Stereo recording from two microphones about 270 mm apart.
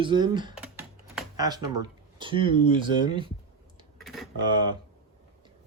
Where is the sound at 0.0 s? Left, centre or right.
Centre.